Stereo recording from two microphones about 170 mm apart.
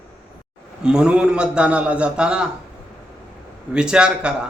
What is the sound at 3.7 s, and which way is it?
Speech, 5° right (ahead or behind).